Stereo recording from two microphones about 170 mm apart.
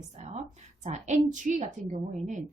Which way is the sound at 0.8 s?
45° right (ahead or behind).